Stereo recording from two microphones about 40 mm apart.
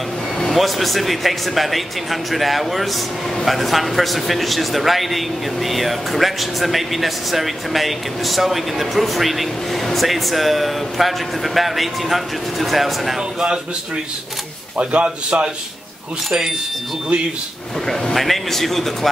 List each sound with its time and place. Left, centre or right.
0.4 s a man's voice: centre
14.8 s a man's voice: right
16.3 s speech: centre
18.1 s a man's voice: centre